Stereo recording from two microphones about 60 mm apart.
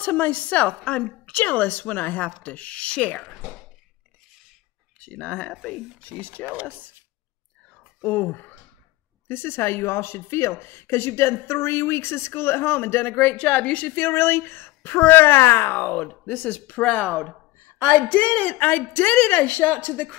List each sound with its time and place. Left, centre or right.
0.0 s a woman's voice: left
5.0 s a woman's voice: left
6.4 s speech: right
8.0 s a woman's voice: left
13.9 s speech: left
16.0 s a woman's voice: left